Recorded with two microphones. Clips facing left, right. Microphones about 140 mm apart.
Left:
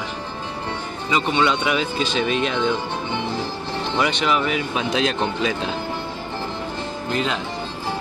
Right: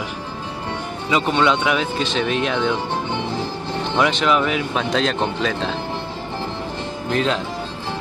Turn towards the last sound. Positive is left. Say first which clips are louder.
# right 3 dB
turn(degrees=5)  # may be behind; listen again after turning